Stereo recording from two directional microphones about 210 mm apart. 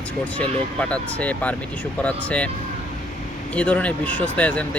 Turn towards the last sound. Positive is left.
turn(degrees=5)  # may be behind; listen again after turning